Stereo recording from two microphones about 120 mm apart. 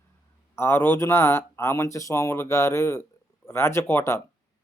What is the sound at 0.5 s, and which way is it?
Speech, 20° left (ahead or behind).